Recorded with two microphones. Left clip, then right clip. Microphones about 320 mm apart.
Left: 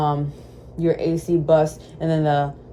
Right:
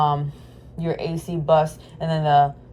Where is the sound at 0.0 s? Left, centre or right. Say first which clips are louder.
Right 2 dB; centre.